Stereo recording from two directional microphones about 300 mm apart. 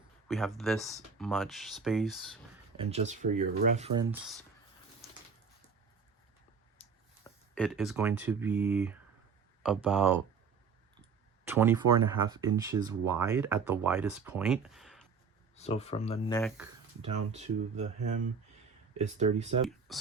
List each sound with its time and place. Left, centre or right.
0.3 s speech: centre
2.7 s speech: right
6.8 s a sound: centre
7.3 s speech: centre
11.4 s speech: centre
15.5 s speech: left
17.3 s speech: right
18.9 s speech: right
19.9 s speech: centre